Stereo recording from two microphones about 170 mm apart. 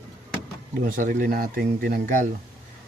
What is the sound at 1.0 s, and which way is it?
Speech, 55° right (ahead or behind).